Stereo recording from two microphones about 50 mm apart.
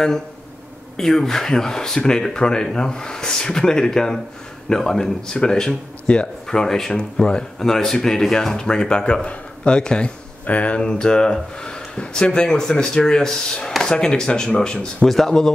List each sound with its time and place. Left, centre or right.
0.9 s speech: centre
15.0 s speech: centre